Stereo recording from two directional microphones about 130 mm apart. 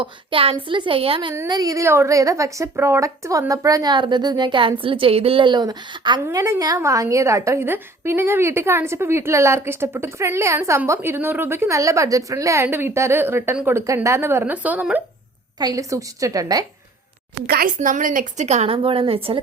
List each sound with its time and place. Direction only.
0.0 s a woman's voice: 45° right (ahead or behind)
1.5 s a woman's voice: 30° right (ahead or behind)
6.2 s a woman's voice: 25° right (ahead or behind)
15.5 s a woman's voice: 30° right (ahead or behind)
17.7 s a woman's voice: 80° right; by 19.4 s 45° right (ahead or behind)